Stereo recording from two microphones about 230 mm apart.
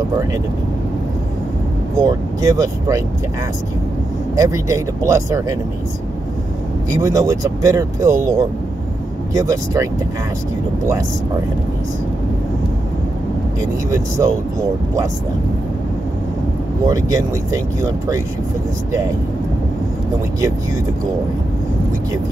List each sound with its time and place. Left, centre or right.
2.0 s speech: centre
4.4 s speech: centre
6.9 s speech: centre
16.8 s speech: centre